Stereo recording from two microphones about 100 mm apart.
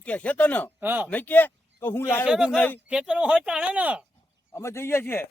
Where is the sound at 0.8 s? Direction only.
20° right (ahead or behind).